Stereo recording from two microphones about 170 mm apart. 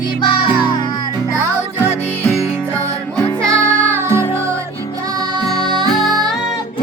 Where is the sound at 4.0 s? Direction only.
15° right (ahead or behind).